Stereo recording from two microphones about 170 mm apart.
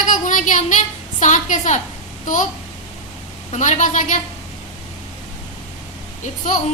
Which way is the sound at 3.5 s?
45° left (ahead or behind).